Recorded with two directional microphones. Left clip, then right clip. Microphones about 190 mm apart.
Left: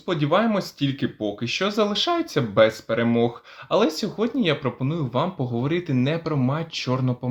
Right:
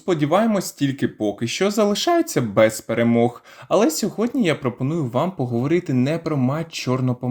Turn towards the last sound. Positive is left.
turn(degrees=-25)  # may be behind; listen again after turning